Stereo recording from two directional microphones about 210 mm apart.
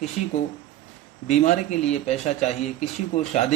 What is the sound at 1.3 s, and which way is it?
A man's voice, 35° left (ahead or behind).